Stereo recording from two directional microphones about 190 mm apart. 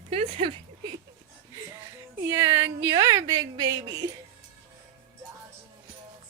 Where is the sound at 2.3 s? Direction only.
15° right (ahead or behind).